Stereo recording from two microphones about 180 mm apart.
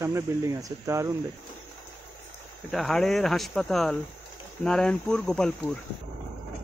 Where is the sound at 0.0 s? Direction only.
20° right (ahead or behind).